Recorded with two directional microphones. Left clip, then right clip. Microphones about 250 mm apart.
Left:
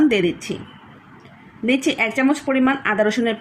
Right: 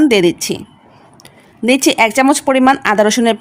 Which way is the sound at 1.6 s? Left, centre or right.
Right.